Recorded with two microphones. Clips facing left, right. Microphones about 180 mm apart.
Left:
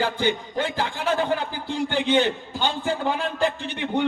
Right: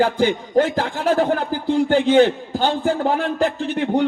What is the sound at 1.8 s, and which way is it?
A man's voice, 45° right (ahead or behind).